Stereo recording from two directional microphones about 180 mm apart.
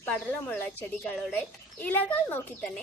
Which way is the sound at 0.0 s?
10° left (ahead or behind).